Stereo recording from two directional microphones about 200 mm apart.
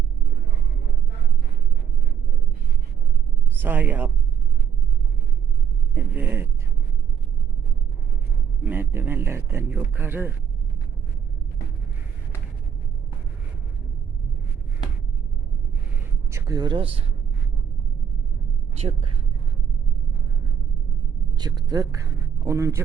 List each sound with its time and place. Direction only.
3.6 s speech: 10° right (ahead or behind)
5.9 s speech: 10° right (ahead or behind)
8.6 s speech: 10° right (ahead or behind)
16.3 s speech: 20° right (ahead or behind)
18.8 s speech: 30° right (ahead or behind)
21.3 s speech: 20° right (ahead or behind)